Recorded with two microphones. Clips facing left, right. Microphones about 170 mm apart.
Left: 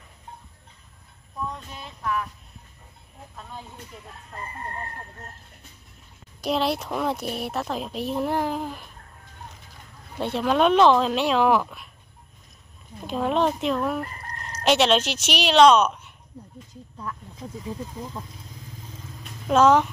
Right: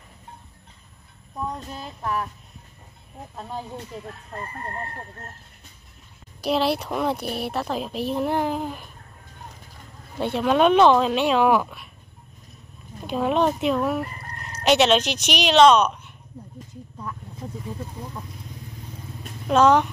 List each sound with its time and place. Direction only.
1.5 s a sound: 40° right (ahead or behind)
3.3 s a sound: 40° right (ahead or behind)
6.4 s speech: 5° right (ahead or behind)
10.1 s speech: centre (ahead or behind)
13.0 s chicken: 5° right (ahead or behind)
14.6 s speech: centre (ahead or behind)
19.4 s speech: 5° left (ahead or behind)